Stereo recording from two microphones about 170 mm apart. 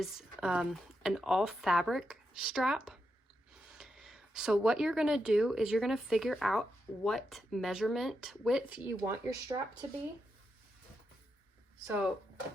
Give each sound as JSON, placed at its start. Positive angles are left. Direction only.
{"t": 0.0, "sound": "speech", "side_deg": 0}
{"t": 11.9, "sound": "speech", "side_deg": -5}